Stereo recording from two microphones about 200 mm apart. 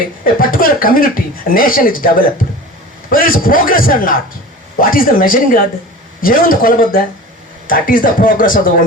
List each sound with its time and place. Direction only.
0.3 s speech: 45° left (ahead or behind)
3.1 s speech: 45° left (ahead or behind)